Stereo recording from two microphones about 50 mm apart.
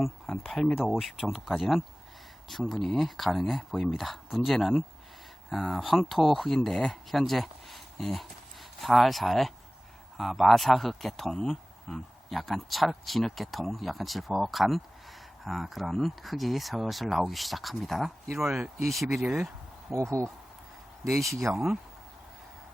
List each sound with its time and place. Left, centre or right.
0.5 s speech: centre
18.3 s speech: centre
18.8 s speech: centre
19.9 s speech: right
21.2 s speech: centre